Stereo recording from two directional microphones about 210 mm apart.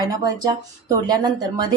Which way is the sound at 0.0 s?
20° right (ahead or behind).